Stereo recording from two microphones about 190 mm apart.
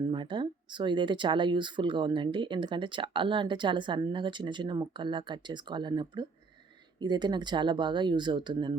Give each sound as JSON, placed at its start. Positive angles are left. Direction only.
{"t": 0.1, "sound": "speech", "side_deg": -25}